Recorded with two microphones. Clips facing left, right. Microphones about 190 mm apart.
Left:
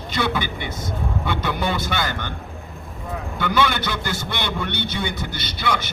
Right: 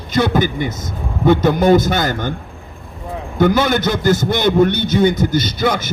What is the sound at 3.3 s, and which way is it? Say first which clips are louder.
A man's voice: right 8 dB; 40° right (ahead or behind).